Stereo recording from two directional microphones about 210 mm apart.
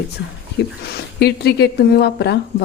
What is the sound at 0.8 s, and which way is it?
A woman's voice, 50° left (ahead or behind).